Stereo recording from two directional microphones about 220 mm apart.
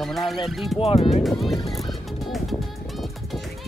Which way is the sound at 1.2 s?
Centre (ahead or behind).